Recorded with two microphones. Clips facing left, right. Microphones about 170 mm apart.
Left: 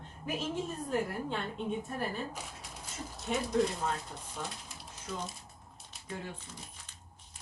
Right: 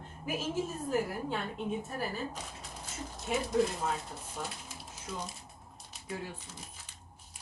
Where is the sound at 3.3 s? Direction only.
5° right (ahead or behind).